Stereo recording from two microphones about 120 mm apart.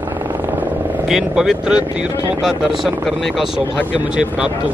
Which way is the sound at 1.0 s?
5° right (ahead or behind).